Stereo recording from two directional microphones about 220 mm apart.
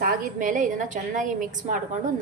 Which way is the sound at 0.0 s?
40° right (ahead or behind).